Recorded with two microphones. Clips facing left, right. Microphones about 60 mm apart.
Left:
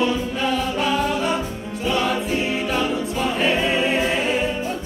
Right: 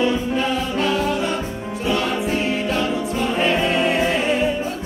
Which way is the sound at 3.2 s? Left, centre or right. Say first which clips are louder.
Right 1 dB; centre.